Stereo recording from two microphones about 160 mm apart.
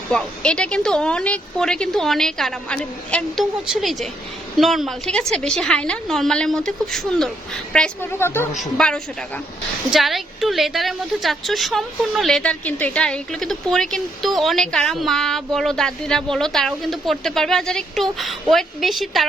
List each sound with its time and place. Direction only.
0.1 s a woman's voice: 5° left (ahead or behind)
8.2 s a woman's voice: 15° left (ahead or behind)